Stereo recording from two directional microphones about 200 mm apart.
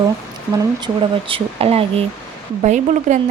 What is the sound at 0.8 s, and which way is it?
Speech, 25° right (ahead or behind).